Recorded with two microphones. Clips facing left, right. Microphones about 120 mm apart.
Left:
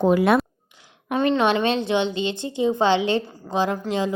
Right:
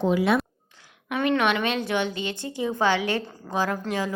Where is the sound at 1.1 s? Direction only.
30° left (ahead or behind).